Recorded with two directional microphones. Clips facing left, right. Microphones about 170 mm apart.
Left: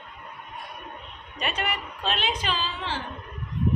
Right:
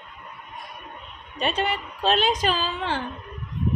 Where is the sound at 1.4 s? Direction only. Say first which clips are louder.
Right 5 dB; 30° right (ahead or behind); by 3.0 s 50° right (ahead or behind).